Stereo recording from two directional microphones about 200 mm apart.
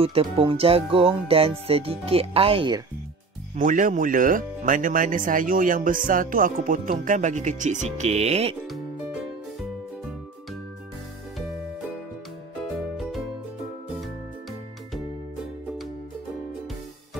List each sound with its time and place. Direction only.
0.0 s speech: 25° right (ahead or behind)
3.5 s speech: 40° right (ahead or behind)
12.9 s music: centre (ahead or behind)